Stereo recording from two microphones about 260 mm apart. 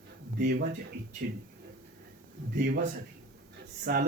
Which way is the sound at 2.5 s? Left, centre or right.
Right.